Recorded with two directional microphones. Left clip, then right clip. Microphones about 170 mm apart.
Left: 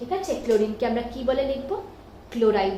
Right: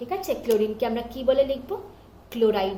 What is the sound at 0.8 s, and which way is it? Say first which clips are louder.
A woman's voice: left 1 dB; 15° right (ahead or behind).